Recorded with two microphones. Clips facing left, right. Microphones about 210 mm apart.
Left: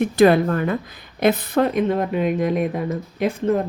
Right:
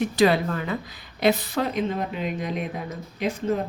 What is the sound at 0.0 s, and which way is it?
A woman's voice, 55° left (ahead or behind).